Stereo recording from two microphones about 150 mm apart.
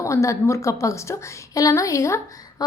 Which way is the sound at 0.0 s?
20° left (ahead or behind).